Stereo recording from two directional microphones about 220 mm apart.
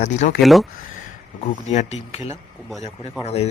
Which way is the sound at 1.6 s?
30° left (ahead or behind).